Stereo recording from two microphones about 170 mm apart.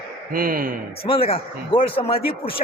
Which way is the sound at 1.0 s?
35° left (ahead or behind).